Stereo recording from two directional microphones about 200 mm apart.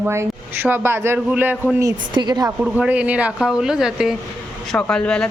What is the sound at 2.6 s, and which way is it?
Speech, 5° right (ahead or behind).